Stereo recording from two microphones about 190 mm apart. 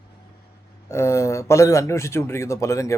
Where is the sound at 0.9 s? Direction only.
15° left (ahead or behind).